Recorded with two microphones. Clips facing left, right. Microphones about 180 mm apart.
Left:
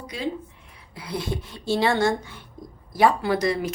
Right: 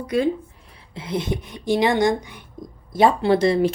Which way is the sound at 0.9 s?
20° right (ahead or behind).